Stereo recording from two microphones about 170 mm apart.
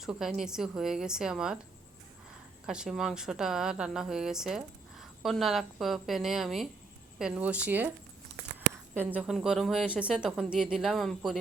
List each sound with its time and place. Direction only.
0.0 s a woman's voice: 5° right (ahead or behind)
2.6 s a woman's voice: 5° right (ahead or behind)
9.0 s a woman's voice: 10° right (ahead or behind)